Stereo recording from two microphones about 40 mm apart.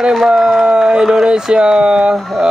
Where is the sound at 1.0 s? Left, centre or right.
Centre.